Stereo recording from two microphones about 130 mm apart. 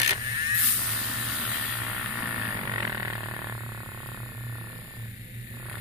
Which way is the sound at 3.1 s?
15° right (ahead or behind).